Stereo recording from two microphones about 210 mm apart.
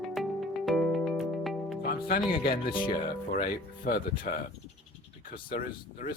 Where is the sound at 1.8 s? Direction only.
45° left (ahead or behind).